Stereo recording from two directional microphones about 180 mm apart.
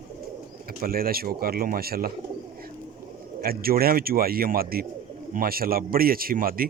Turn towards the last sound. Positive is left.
turn(degrees=-55)  # may be behind; listen again after turning